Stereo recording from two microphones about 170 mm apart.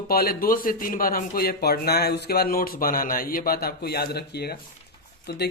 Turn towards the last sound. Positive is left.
turn(degrees=70)  # may be behind; listen again after turning